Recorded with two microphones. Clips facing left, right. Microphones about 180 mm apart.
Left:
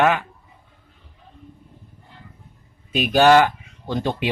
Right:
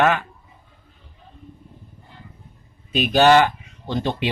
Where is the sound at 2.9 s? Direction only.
10° left (ahead or behind).